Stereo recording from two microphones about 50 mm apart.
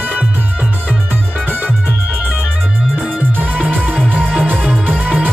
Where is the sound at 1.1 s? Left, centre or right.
Right.